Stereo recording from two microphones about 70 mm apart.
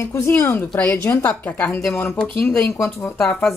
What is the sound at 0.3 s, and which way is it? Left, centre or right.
Speech, left.